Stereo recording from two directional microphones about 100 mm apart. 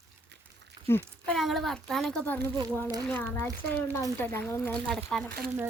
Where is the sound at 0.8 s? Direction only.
50° right (ahead or behind).